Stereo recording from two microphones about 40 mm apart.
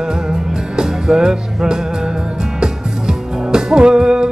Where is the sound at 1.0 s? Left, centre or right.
Centre.